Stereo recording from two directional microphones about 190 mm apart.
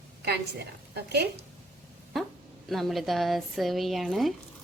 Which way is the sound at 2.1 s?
Centre (ahead or behind).